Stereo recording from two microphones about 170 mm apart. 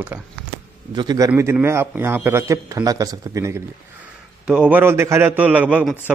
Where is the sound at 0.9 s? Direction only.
25° right (ahead or behind).